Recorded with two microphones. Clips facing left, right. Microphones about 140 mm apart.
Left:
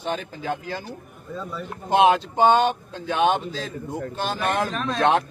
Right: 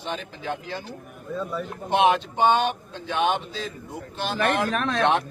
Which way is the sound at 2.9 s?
40° left (ahead or behind).